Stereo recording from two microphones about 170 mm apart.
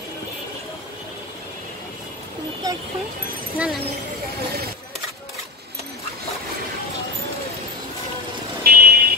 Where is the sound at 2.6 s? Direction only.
20° right (ahead or behind).